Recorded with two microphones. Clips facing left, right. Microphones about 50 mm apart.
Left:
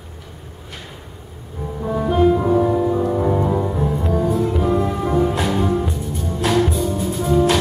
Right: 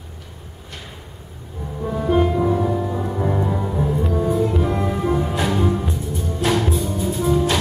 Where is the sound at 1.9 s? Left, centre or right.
Centre.